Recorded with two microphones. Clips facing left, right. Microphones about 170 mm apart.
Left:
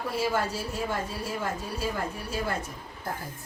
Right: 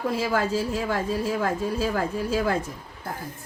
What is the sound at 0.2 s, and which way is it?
A woman's voice, 90° right.